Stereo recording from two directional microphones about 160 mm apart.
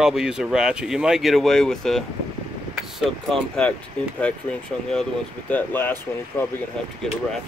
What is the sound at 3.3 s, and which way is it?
Speech, 5° left (ahead or behind).